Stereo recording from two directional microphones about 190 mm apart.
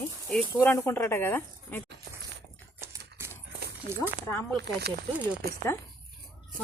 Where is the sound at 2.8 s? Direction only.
15° right (ahead or behind).